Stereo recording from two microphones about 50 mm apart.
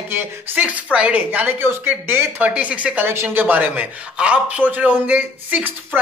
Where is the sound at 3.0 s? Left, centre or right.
Right.